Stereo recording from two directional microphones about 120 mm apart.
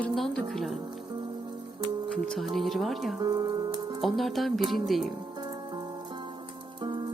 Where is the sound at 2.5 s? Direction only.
Centre (ahead or behind).